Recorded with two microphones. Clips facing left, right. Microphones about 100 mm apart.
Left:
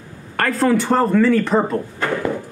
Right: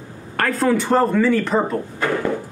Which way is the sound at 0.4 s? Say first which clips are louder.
Left 1 dB; centre (ahead or behind).